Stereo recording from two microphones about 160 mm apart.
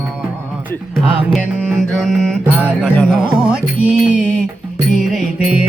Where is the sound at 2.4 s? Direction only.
10° right (ahead or behind).